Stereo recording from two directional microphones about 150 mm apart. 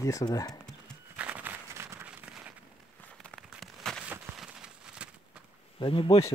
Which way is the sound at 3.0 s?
5° left (ahead or behind).